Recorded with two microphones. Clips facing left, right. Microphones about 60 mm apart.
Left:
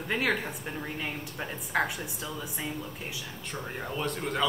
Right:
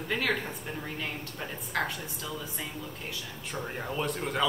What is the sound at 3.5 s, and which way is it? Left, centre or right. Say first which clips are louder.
Speech: right 2 dB; centre.